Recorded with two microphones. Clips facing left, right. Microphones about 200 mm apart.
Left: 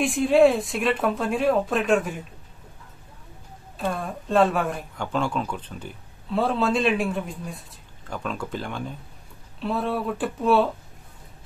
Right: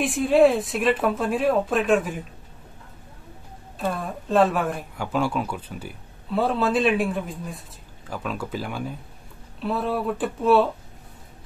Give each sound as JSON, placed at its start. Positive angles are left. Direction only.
{"t": 0.0, "sound": "speech", "side_deg": 0}
{"t": 3.7, "sound": "speech", "side_deg": 0}